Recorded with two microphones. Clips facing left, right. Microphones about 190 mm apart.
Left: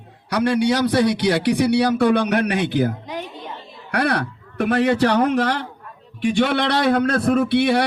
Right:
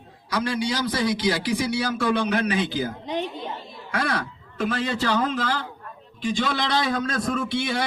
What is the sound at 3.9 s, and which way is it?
A man's voice, 65° left (ahead or behind).